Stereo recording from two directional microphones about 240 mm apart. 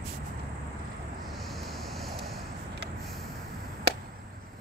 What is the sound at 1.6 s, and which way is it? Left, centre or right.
Vehicle, centre.